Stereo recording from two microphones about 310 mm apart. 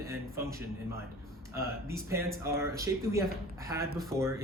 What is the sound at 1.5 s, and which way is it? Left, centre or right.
Speech, centre.